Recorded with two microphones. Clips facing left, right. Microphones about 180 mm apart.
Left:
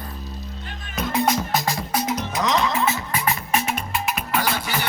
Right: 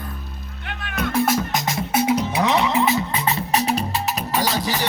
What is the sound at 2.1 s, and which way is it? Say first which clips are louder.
Music: right 3 dB; 10° right (ahead or behind).